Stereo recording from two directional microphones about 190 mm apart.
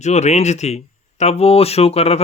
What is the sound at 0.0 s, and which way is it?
Speech, 35° left (ahead or behind).